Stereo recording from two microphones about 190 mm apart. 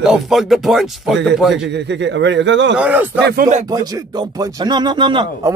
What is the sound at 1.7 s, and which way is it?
A man's voice, 65° right (ahead or behind).